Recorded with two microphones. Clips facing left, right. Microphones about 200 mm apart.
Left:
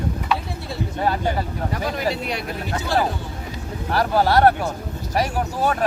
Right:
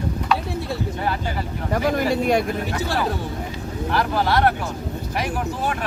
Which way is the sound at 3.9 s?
40° left (ahead or behind).